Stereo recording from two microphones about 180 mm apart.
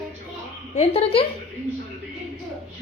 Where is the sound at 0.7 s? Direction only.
35° left (ahead or behind).